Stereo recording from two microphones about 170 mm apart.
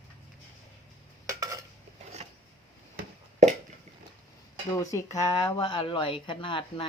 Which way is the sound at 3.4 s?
45° right (ahead or behind).